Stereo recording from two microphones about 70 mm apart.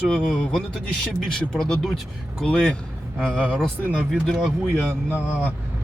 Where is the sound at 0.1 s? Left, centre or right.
Centre.